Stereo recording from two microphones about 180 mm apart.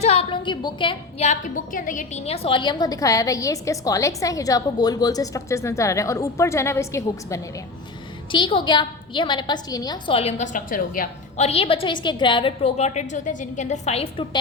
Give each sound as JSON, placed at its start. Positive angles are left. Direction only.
{"t": 0.0, "sound": "a woman's voice", "side_deg": 35}
{"t": 8.3, "sound": "a woman's voice", "side_deg": 30}
{"t": 10.2, "sound": "a woman's voice", "side_deg": 35}
{"t": 11.4, "sound": "a woman's voice", "side_deg": 30}